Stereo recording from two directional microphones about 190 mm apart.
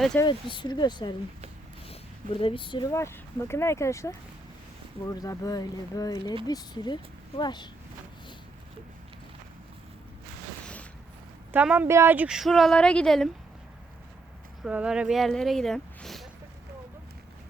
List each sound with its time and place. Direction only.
0.2 s speech: 25° left (ahead or behind)
11.5 s speech: 5° right (ahead or behind)
14.6 s speech: 5° right (ahead or behind)